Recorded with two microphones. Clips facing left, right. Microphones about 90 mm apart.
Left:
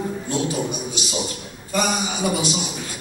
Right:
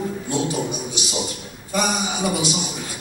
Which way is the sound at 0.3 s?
20° right (ahead or behind).